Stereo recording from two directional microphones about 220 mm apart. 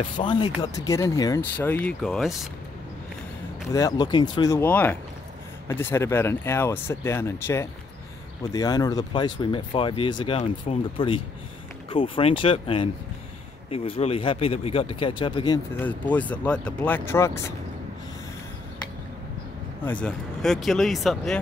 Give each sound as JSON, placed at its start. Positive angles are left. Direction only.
{"t": 0.2, "sound": "speech", "side_deg": 20}
{"t": 3.7, "sound": "speech", "side_deg": 15}
{"t": 15.8, "sound": "speech", "side_deg": 10}
{"t": 19.8, "sound": "speech", "side_deg": 5}